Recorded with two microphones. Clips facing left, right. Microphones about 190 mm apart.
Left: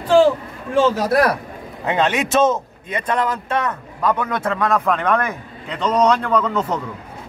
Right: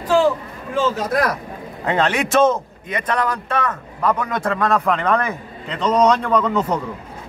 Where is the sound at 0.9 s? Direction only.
35° left (ahead or behind).